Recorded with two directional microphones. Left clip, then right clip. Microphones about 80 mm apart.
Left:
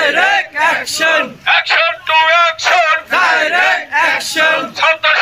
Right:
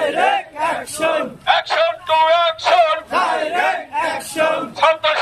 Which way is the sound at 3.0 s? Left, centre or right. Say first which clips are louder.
Left 6 dB; left.